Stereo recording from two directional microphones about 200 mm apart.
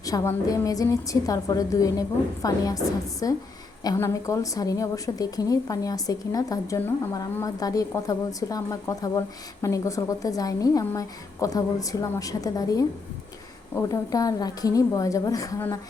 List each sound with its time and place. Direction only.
0.0 s a woman's voice: 15° left (ahead or behind)